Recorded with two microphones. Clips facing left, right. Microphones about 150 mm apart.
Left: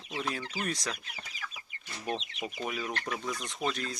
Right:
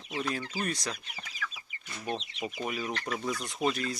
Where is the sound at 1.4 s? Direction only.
30° left (ahead or behind).